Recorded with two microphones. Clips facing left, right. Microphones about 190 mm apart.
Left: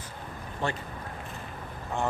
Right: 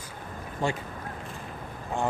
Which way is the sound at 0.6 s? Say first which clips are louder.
Right 3 dB; 10° right (ahead or behind).